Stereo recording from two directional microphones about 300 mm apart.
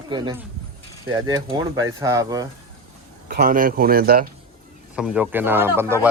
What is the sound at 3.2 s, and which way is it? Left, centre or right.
A man's voice, right.